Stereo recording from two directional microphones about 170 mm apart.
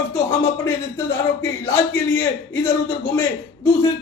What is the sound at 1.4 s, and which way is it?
A man's voice, 15° left (ahead or behind).